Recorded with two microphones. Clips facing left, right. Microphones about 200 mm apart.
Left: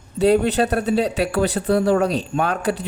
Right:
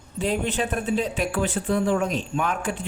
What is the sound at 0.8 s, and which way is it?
Speech, 40° left (ahead or behind).